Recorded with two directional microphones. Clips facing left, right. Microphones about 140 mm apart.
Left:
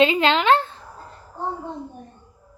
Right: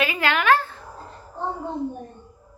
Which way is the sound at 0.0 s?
25° left (ahead or behind).